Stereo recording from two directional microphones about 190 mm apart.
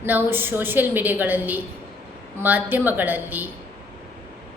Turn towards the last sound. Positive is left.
turn(degrees=-10)  # may be behind; listen again after turning